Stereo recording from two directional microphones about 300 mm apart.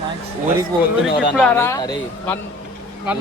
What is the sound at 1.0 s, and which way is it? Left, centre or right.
A man's voice, centre.